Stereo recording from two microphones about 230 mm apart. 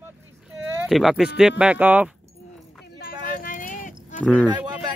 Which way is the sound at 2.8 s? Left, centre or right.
Left.